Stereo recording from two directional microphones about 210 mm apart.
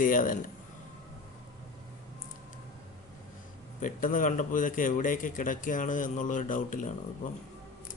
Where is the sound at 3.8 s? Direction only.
40° left (ahead or behind).